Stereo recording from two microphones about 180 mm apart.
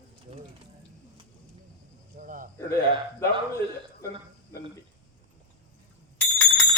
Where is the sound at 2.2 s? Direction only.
50° right (ahead or behind).